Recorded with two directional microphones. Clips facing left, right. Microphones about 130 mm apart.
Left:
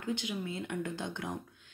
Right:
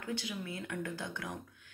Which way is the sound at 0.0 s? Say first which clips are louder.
Left 3 dB; 20° left (ahead or behind).